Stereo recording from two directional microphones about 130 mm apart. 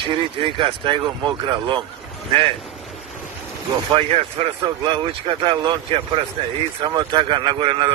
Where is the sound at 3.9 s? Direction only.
50° right (ahead or behind).